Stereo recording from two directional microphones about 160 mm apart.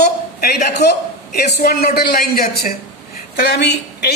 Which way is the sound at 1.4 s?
80° left.